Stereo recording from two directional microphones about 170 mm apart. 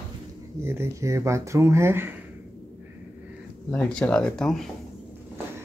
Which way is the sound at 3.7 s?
5° left (ahead or behind).